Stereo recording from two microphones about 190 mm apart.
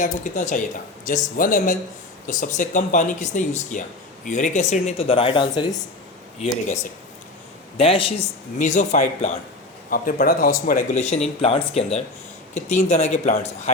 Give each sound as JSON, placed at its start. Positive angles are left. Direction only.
{"t": 0.0, "sound": "speech", "side_deg": 40}
{"t": 7.8, "sound": "a man's voice", "side_deg": 30}
{"t": 8.5, "sound": "speech", "side_deg": 40}